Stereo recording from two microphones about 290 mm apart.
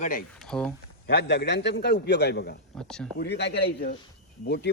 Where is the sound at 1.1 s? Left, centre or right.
Left.